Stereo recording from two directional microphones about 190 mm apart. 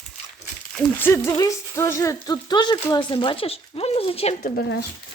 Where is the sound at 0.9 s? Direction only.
10° left (ahead or behind); by 4.4 s 30° left (ahead or behind).